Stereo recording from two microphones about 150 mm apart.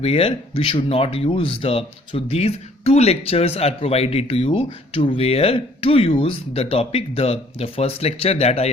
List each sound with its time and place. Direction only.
0.0 s speech: 40° left (ahead or behind)